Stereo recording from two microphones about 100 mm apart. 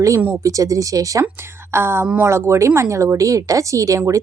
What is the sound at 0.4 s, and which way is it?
Speech, 35° right (ahead or behind).